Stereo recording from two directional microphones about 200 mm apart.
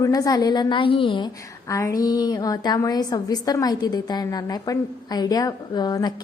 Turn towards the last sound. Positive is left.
turn(degrees=20)  # may be behind; listen again after turning